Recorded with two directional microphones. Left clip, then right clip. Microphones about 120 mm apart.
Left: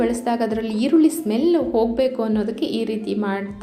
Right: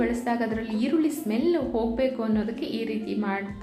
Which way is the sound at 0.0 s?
50° left (ahead or behind).